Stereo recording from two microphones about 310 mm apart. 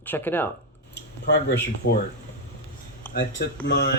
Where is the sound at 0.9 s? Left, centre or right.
Left.